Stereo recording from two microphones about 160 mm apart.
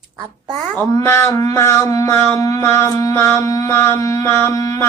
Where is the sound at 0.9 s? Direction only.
20° left (ahead or behind).